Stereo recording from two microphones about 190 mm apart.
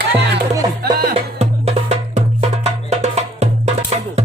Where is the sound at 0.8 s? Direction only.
50° right (ahead or behind).